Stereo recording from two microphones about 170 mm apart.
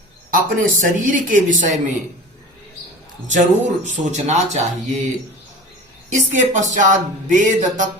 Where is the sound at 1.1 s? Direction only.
50° right (ahead or behind).